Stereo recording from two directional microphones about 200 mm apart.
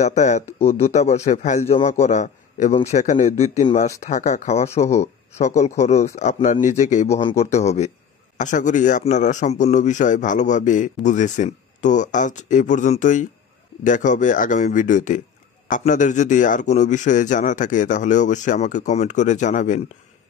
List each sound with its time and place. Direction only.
0.0 s a man's voice: 35° left (ahead or behind)
0.5 s speech: 10° left (ahead or behind)
0.7 s a man's voice: 30° left (ahead or behind)